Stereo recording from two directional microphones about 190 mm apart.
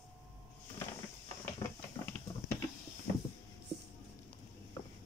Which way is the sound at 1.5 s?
10° left (ahead or behind).